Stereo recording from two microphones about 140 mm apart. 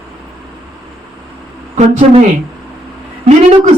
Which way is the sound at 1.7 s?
50° right (ahead or behind).